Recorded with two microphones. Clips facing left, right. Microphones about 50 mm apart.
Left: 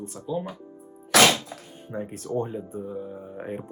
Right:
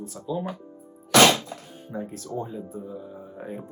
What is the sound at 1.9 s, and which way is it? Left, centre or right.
Speech, left.